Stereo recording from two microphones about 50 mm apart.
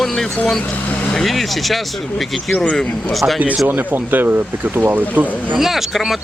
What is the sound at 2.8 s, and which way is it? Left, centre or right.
Speech, centre.